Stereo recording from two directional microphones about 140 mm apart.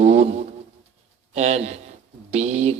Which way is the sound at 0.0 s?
55° right (ahead or behind).